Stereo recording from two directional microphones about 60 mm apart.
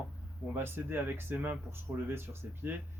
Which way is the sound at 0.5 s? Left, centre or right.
Right.